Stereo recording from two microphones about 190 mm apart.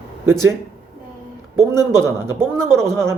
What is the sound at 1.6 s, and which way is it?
A man's voice, 15° right (ahead or behind).